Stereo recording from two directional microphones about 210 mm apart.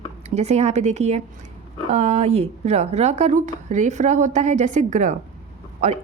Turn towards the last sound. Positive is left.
turn(degrees=-35)  # may be behind; listen again after turning